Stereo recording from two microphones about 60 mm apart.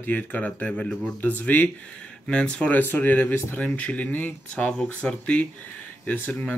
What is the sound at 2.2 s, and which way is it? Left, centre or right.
Speech, centre.